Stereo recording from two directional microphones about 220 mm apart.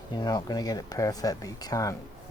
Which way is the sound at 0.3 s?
20° left (ahead or behind).